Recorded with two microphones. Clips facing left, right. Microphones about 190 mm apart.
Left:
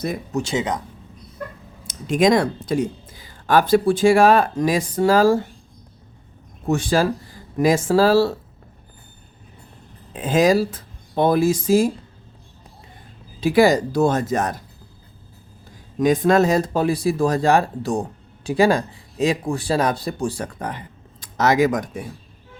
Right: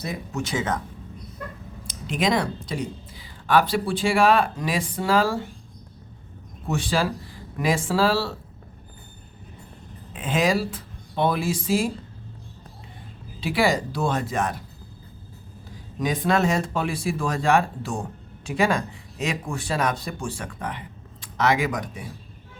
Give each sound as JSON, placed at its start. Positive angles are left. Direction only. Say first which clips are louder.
{"t": 0.3, "sound": "speech", "louder": "left 4 dB", "side_deg": 30}
{"t": 1.9, "sound": "speech", "louder": "left 7 dB", "side_deg": 45}
{"t": 6.7, "sound": "speech", "louder": "left 6 dB", "side_deg": 45}
{"t": 10.1, "sound": "speech", "louder": "left 6 dB", "side_deg": 35}
{"t": 13.4, "sound": "speech", "louder": "left 7 dB", "side_deg": 45}
{"t": 16.0, "sound": "speech", "louder": "left 7 dB", "side_deg": 45}